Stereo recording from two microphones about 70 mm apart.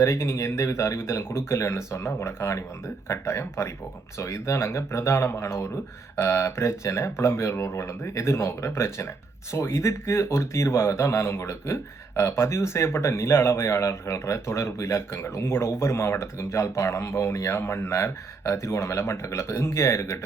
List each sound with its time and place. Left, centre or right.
0.0 s speech: left